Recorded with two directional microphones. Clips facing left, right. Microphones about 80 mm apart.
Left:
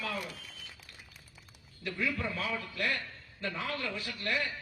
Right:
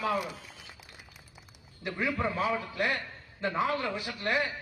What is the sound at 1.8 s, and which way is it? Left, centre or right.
Speech, right.